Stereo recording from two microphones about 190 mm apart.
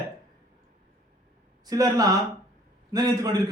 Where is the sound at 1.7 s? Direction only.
20° right (ahead or behind).